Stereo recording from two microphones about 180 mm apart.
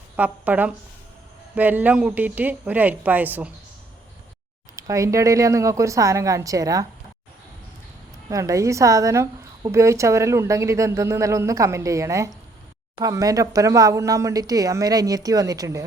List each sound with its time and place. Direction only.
0.2 s a woman's voice: 10° right (ahead or behind)
4.8 s a woman's voice: 20° right (ahead or behind)
8.3 s a woman's voice: 20° right (ahead or behind)